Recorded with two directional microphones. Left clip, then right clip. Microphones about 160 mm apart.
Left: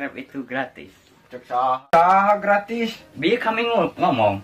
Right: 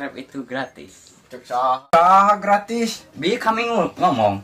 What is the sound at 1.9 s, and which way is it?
Speech, 5° right (ahead or behind).